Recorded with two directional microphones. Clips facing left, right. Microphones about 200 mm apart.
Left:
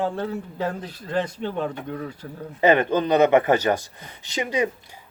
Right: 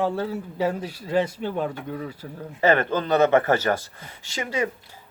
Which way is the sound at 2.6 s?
15° left (ahead or behind).